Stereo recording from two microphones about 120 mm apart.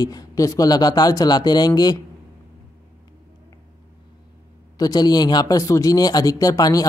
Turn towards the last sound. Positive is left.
turn(degrees=30)  # may be behind; listen again after turning